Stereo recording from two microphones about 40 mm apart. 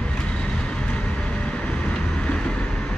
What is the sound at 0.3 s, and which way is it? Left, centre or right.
Vehicle, left.